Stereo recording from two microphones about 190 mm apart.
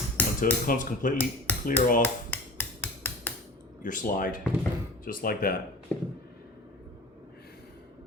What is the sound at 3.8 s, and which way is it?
Speech, 45° left (ahead or behind).